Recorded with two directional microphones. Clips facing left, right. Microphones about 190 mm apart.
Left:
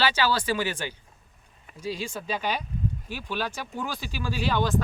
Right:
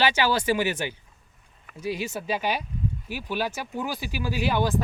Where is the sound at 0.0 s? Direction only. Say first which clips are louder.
Right 2 dB; 15° right (ahead or behind).